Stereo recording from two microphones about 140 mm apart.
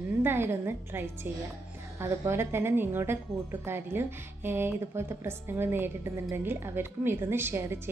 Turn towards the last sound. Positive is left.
turn(degrees=-15)  # may be behind; listen again after turning